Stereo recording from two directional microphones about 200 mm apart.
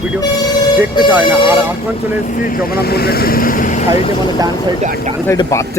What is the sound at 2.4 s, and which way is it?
Speech, 45° left (ahead or behind).